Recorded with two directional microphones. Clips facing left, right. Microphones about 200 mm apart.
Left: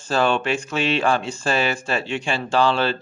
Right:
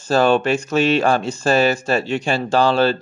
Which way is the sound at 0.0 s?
40° right (ahead or behind).